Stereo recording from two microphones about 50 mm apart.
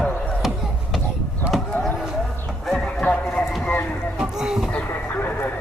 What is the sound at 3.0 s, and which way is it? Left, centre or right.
Horse, left.